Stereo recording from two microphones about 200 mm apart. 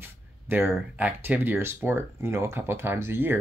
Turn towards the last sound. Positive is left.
turn(degrees=-10)  # may be behind; listen again after turning